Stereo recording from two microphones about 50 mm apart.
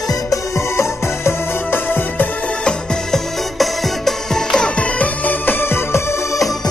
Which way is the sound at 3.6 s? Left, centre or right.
Centre.